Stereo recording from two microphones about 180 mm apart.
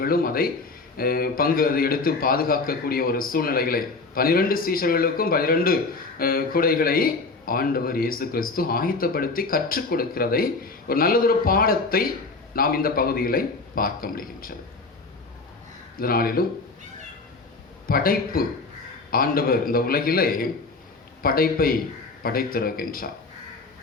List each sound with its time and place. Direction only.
0.0 s a man's voice: 55° left (ahead or behind)
16.0 s a man's voice: 55° left (ahead or behind)
17.8 s a man's voice: 55° left (ahead or behind)